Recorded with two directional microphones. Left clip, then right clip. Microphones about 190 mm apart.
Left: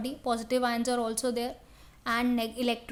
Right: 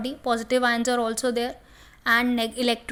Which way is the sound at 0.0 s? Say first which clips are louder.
Right 5 dB; 15° right (ahead or behind).